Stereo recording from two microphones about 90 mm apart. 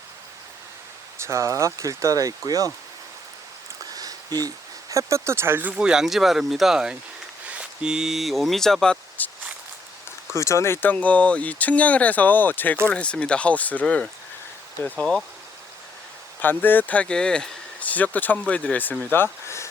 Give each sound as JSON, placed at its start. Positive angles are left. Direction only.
{"t": 1.2, "sound": "speech", "side_deg": -35}
{"t": 3.9, "sound": "speech", "side_deg": -45}
{"t": 5.7, "sound": "speech", "side_deg": -5}
{"t": 9.2, "sound": "walk", "side_deg": 20}
{"t": 10.3, "sound": "speech", "side_deg": 35}
{"t": 14.8, "sound": "speech", "side_deg": 25}
{"t": 16.4, "sound": "speech", "side_deg": 20}